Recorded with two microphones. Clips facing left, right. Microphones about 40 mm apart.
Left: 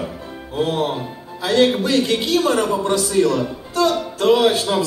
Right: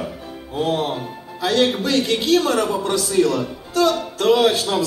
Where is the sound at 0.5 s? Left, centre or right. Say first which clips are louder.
Left 1 dB; left.